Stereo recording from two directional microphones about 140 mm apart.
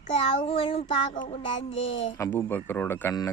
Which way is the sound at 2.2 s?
15° left (ahead or behind).